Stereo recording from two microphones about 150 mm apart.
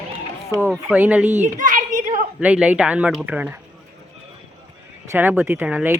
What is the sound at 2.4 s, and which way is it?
Speech, 10° right (ahead or behind).